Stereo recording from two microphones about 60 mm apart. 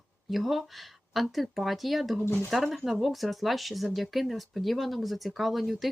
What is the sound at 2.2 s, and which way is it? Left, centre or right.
Speech, left.